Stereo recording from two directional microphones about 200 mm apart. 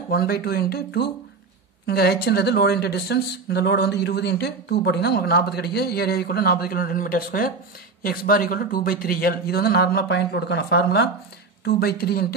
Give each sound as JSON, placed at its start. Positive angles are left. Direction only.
{"t": 0.1, "sound": "a man's voice", "side_deg": 50}